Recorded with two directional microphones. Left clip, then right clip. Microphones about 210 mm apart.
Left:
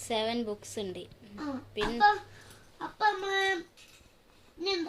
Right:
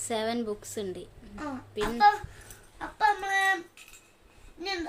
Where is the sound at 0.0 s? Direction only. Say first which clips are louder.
Right 1 dB; 15° right (ahead or behind).